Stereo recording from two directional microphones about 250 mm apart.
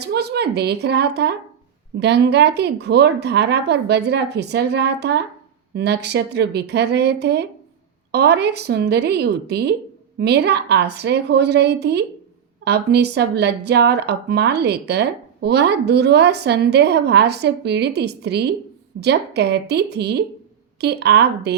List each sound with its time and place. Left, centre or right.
0.0 s speech: right